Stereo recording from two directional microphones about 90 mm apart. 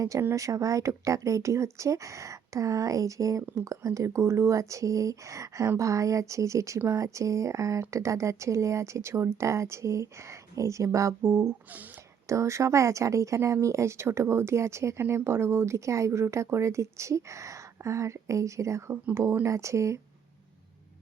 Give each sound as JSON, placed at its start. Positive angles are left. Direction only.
{"t": 0.0, "sound": "speech", "side_deg": -35}
{"t": 11.2, "sound": "speech", "side_deg": -25}
{"t": 12.3, "sound": "speech", "side_deg": -35}